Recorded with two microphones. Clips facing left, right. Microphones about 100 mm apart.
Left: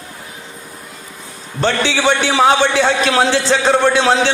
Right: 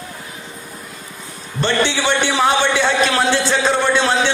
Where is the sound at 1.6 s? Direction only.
90° left.